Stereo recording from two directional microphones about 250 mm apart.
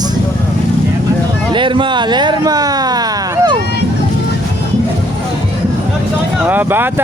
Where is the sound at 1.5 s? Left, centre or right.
Centre.